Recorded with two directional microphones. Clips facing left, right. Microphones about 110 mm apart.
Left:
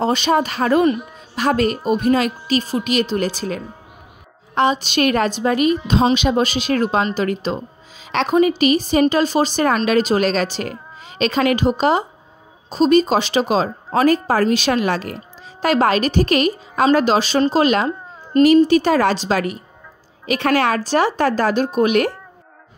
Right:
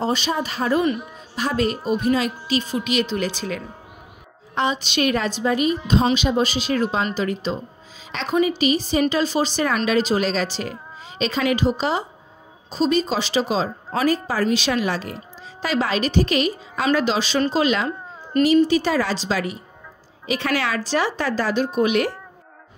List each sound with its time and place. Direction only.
0.0 s a woman's voice: 65° left (ahead or behind)